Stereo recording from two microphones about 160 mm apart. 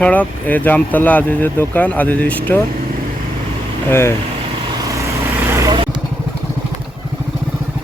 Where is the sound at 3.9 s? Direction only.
15° left (ahead or behind).